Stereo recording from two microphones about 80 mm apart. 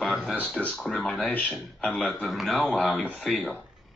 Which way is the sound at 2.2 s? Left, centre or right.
Centre.